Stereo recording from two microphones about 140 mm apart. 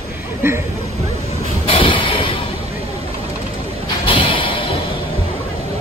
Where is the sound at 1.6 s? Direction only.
40° left (ahead or behind).